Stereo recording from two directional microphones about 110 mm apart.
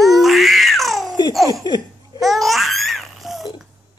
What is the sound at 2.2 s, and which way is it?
Babbling, centre (ahead or behind).